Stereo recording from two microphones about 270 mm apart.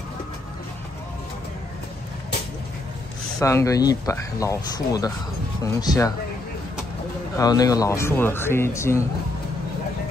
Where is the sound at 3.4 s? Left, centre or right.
Centre.